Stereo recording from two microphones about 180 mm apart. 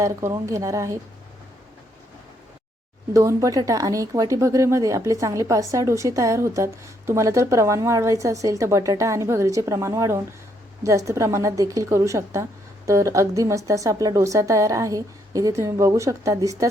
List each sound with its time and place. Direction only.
0.0 s speech: 15° right (ahead or behind)
3.1 s speech: 15° right (ahead or behind)